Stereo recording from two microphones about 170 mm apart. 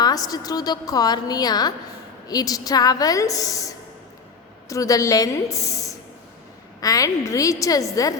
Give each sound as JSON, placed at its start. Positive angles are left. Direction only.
{"t": 0.0, "sound": "a woman's voice", "side_deg": 20}